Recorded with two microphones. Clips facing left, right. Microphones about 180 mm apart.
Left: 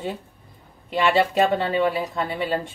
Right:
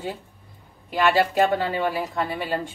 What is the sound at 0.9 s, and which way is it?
Speech, 25° left (ahead or behind).